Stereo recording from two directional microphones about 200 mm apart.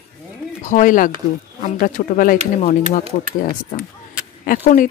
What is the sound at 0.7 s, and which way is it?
Speech, 40° left (ahead or behind).